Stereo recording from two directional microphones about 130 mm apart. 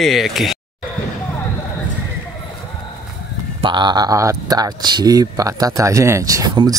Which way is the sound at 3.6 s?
35° right (ahead or behind).